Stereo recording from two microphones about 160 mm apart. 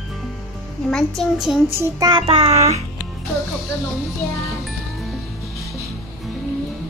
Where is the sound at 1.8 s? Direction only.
25° right (ahead or behind); by 2.8 s 40° right (ahead or behind).